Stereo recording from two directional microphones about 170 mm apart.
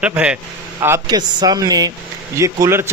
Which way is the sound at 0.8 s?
20° right (ahead or behind).